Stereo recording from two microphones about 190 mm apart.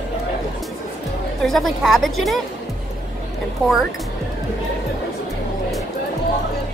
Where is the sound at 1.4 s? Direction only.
Centre (ahead or behind).